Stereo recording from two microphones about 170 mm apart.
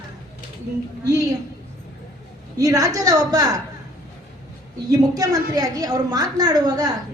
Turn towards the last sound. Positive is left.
turn(degrees=-20)  # may be behind; listen again after turning